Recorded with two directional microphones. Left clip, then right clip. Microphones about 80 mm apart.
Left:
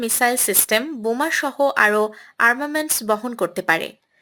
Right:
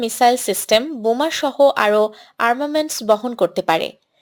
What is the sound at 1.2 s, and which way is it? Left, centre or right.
Speech, right.